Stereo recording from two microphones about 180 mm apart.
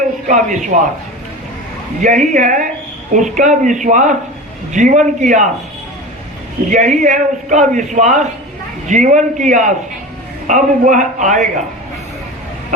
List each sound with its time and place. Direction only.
0.3 s a man's voice: 45° right (ahead or behind)
2.0 s a man's voice: 45° right (ahead or behind)
6.7 s a man's voice: 40° right (ahead or behind)